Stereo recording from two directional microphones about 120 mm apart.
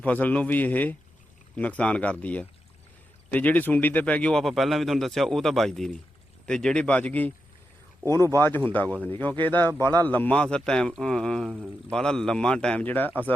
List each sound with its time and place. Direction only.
0.0 s a man's voice: 15° left (ahead or behind)
8.0 s a man's voice: 25° left (ahead or behind)